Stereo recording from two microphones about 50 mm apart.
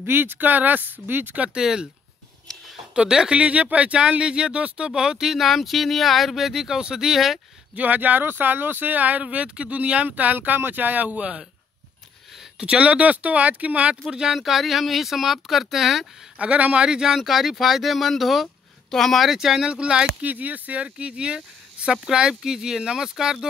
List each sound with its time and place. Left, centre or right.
0.0 s speech: right
1.3 s speech: right
1.6 s speech: centre
2.9 s speech: centre
7.7 s speech: right
11.1 s speech: right
12.5 s speech: centre
14.0 s speech: centre
16.3 s speech: right
16.8 s speech: centre
19.3 s speech: centre
20.2 s speech: right; by 23.4 s centre